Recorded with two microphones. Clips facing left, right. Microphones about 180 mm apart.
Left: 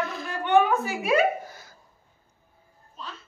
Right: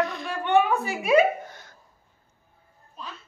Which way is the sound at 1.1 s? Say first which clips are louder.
Right 3 dB; 5° left (ahead or behind).